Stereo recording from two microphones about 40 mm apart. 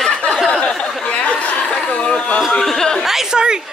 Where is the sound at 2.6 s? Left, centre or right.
Centre.